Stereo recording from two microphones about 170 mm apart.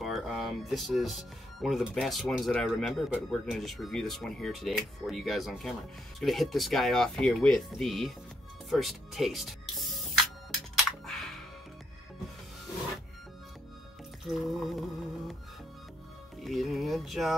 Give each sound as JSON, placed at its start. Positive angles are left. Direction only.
{"t": 0.0, "sound": "speech", "side_deg": 0}
{"t": 8.6, "sound": "music", "side_deg": 0}
{"t": 14.2, "sound": "a sound", "side_deg": 0}
{"t": 16.3, "sound": "speech", "side_deg": 0}